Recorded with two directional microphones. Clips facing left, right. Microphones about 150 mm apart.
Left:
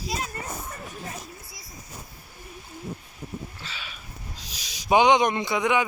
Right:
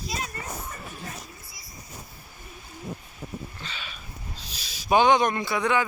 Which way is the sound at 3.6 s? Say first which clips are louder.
Right 1 dB; 10° left (ahead or behind).